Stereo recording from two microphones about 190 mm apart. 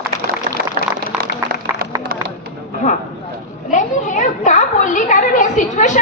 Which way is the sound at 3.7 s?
40° left (ahead or behind).